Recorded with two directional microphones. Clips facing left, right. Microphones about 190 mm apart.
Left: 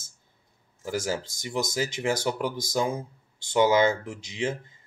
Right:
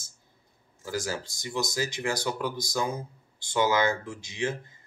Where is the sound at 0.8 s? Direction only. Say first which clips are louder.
Left 3 dB; 25° left (ahead or behind).